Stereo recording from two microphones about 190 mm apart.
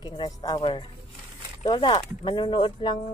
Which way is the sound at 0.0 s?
20° left (ahead or behind).